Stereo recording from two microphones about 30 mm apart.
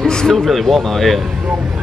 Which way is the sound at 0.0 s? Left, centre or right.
Left.